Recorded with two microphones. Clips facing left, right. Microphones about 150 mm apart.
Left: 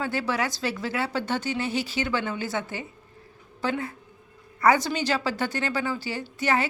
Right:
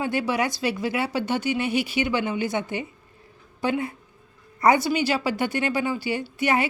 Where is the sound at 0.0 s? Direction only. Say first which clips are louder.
Right 3 dB; 15° right (ahead or behind).